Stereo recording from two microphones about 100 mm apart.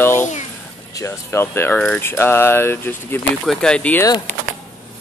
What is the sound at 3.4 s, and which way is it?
Speech, 5° left (ahead or behind).